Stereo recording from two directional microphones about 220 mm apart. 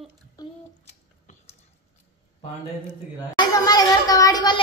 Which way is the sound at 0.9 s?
30° left (ahead or behind).